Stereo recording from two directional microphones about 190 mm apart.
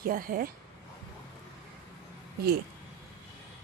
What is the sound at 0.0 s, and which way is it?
Speech, 50° right (ahead or behind).